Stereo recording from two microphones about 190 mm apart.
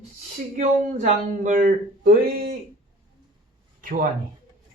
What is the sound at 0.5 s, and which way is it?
Speech, 40° right (ahead or behind).